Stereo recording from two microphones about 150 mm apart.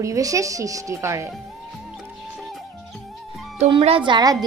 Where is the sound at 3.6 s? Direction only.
40° right (ahead or behind).